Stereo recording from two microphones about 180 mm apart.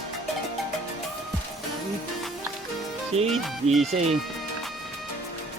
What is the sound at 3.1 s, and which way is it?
Speech, 35° right (ahead or behind).